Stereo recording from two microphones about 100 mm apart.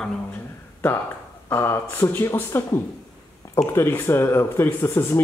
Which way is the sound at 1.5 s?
20° left (ahead or behind).